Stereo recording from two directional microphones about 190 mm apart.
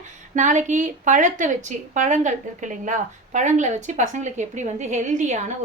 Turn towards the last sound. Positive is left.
turn(degrees=-40)  # may be behind; listen again after turning